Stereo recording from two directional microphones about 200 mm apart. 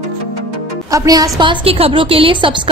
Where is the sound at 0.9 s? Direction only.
15° right (ahead or behind).